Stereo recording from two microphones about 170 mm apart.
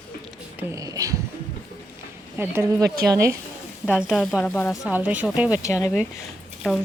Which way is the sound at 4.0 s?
Centre (ahead or behind).